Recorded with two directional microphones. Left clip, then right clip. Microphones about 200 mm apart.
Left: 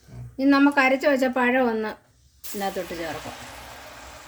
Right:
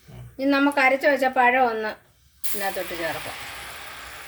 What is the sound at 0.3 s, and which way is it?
Speech, 45° left (ahead or behind).